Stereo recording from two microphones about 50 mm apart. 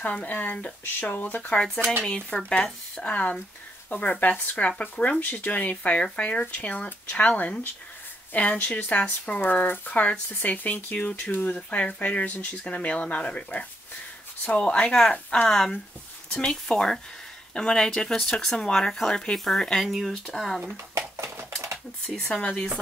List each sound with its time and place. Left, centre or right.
0.0 s a woman's voice: left
2.0 s a woman's voice: centre
14.9 s speech: centre
19.9 s speech: centre
20.7 s a sound: right
22.4 s speech: left